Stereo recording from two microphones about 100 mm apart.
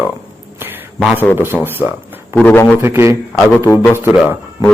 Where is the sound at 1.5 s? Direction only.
5° right (ahead or behind).